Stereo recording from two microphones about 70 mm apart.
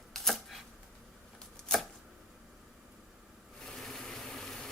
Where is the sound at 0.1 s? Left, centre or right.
Centre.